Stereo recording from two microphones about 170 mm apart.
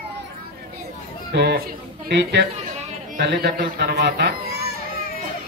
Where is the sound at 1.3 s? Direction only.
80° right.